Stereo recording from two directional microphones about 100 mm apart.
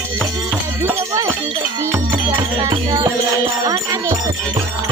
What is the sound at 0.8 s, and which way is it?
Music, 30° right (ahead or behind).